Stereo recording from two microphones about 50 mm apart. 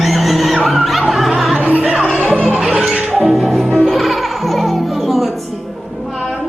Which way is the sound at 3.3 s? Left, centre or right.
Centre.